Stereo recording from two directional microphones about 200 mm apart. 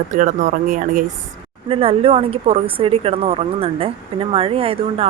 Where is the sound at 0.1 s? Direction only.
40° right (ahead or behind).